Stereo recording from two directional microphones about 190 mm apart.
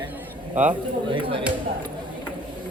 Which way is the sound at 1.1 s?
25° right (ahead or behind).